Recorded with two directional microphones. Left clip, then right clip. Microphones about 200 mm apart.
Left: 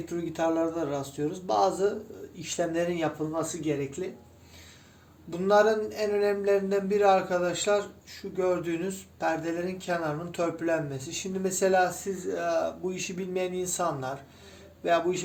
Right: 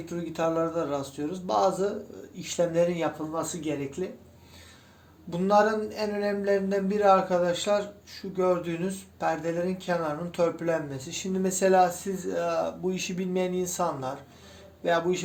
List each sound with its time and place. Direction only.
0.1 s speech: 15° right (ahead or behind)
5.3 s speech: 15° right (ahead or behind)